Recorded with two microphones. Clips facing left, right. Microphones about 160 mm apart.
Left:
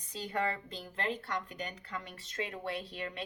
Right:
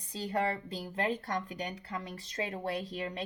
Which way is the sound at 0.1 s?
35° right (ahead or behind).